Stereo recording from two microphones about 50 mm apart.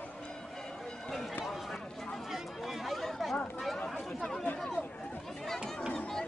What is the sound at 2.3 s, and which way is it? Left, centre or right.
Chatter, centre.